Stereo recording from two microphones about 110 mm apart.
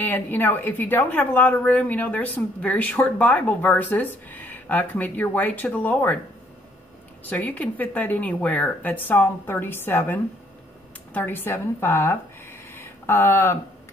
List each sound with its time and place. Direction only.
0.0 s a woman's voice: 15° left (ahead or behind)
7.2 s a woman's voice: 15° left (ahead or behind)